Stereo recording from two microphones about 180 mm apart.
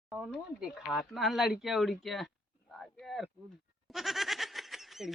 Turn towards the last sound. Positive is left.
turn(degrees=0)  # may be behind; listen again after turning